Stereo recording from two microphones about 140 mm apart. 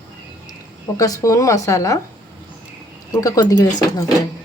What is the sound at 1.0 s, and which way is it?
Speech, 20° left (ahead or behind).